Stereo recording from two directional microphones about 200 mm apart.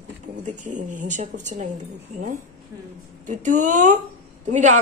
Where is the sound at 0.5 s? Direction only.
40° right (ahead or behind).